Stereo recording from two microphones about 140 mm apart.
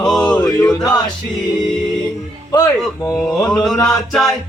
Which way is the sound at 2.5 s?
25° left (ahead or behind).